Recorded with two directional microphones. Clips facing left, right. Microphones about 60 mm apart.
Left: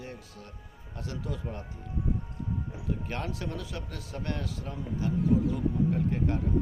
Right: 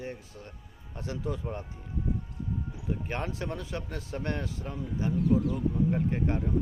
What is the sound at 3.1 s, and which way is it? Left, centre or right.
Speech, right.